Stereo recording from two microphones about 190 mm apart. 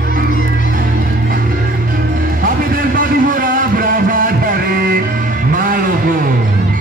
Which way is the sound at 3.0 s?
45° right (ahead or behind).